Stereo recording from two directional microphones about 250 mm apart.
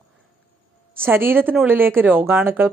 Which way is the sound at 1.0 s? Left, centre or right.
Centre.